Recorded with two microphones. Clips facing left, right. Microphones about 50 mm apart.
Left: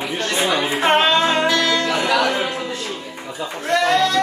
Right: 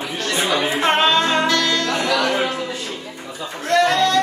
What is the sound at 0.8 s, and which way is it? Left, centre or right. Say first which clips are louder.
Music: left 2 dB; centre.